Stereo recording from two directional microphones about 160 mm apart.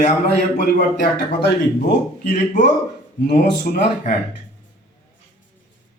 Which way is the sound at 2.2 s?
45° left (ahead or behind).